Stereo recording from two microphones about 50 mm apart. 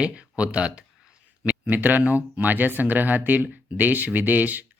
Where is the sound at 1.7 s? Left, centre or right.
Right.